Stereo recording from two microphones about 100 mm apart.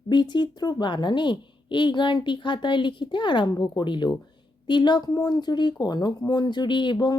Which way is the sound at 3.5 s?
40° left (ahead or behind).